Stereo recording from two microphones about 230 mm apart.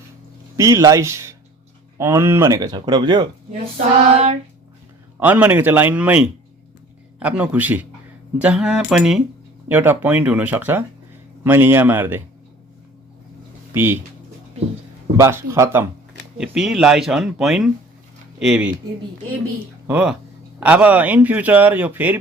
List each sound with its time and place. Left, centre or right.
0.5 s speech: centre
4.1 s child singing: right
5.2 s speech: centre
13.7 s speech: centre
15.2 s speech: centre
19.9 s speech: centre